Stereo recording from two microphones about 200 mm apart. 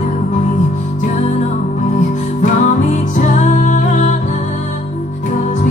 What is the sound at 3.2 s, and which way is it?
Music, 40° left (ahead or behind).